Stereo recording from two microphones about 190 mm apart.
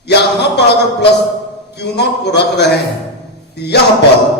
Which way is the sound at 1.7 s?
60° left (ahead or behind).